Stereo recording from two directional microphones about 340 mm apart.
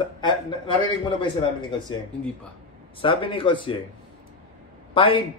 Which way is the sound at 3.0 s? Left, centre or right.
Centre.